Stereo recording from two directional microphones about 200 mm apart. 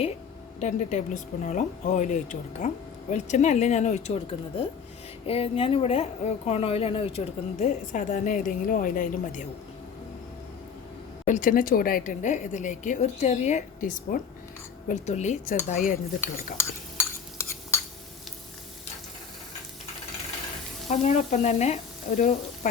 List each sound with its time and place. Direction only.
0.6 s a woman's voice: 40° left (ahead or behind)
11.3 s a woman's voice: 40° left (ahead or behind)
20.8 s sizzle: 35° left (ahead or behind)